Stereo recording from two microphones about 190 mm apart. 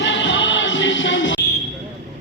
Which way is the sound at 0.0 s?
70° left (ahead or behind).